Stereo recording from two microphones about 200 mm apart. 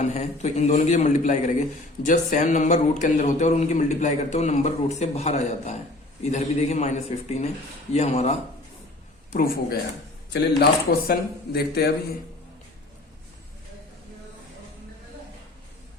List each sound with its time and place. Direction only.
0.0 s a man's voice: 35° left (ahead or behind)
9.3 s a man's voice: 50° left (ahead or behind)